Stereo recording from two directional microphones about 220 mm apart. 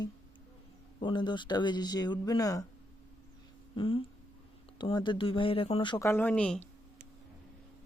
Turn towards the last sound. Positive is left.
turn(degrees=5)  # may be behind; listen again after turning